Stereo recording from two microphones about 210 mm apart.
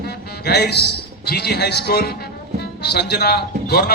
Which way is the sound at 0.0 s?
50° left (ahead or behind).